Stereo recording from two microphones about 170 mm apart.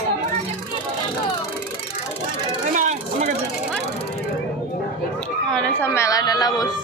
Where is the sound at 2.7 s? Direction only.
45° right (ahead or behind).